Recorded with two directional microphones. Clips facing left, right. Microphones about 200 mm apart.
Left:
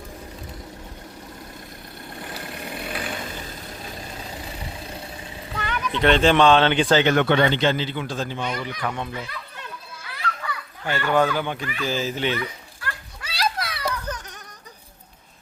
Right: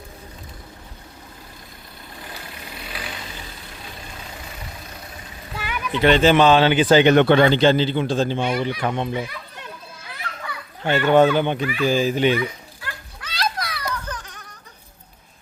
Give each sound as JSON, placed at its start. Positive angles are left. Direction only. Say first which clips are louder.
{"t": 2.2, "sound": "vehicle", "louder": "left 4 dB", "side_deg": 55}
{"t": 5.5, "sound": "speech", "louder": "right 2 dB", "side_deg": -10}
{"t": 7.0, "sound": "speech", "louder": "right 5 dB", "side_deg": -20}
{"t": 7.3, "sound": "a man's voice", "louder": "right 5 dB", "side_deg": -35}
{"t": 10.2, "sound": "a child's voice", "louder": "left 3 dB", "side_deg": -20}
{"t": 13.2, "sound": "children playing", "louder": "even", "side_deg": 5}
{"t": 13.7, "sound": "a sound", "louder": "left 1 dB", "side_deg": 25}